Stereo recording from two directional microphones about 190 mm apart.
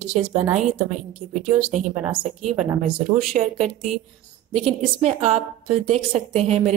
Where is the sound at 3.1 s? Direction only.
35° right (ahead or behind).